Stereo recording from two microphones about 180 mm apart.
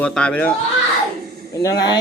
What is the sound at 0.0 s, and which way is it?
Speech, 5° left (ahead or behind).